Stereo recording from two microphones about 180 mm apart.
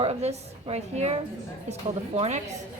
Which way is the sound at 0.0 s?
35° right (ahead or behind).